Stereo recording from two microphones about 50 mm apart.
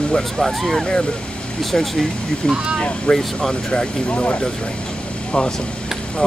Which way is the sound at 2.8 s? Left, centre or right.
Centre.